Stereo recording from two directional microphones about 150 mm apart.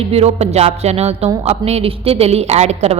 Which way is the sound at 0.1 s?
45° right (ahead or behind).